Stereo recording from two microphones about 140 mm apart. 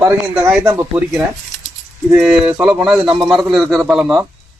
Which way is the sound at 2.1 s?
5° right (ahead or behind).